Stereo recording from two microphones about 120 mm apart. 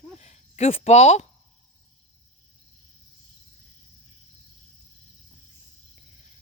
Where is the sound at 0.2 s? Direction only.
65° left (ahead or behind).